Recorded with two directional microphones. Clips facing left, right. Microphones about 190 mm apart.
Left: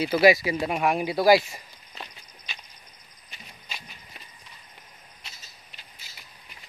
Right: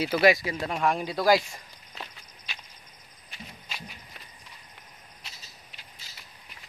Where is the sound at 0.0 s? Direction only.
Centre (ahead or behind).